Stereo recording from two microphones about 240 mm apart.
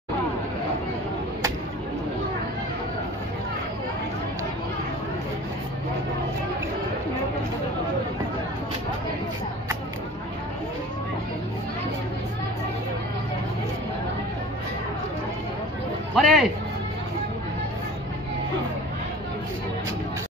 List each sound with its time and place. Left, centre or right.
16.2 s speech: centre